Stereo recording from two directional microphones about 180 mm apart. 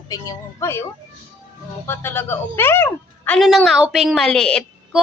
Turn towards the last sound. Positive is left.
turn(degrees=5)  # may be behind; listen again after turning